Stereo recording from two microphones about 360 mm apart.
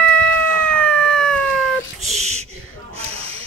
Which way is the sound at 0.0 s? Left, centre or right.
Centre.